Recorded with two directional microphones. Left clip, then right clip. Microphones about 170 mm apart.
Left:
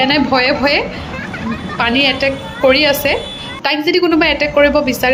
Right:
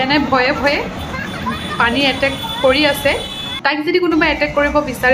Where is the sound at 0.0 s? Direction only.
20° left (ahead or behind).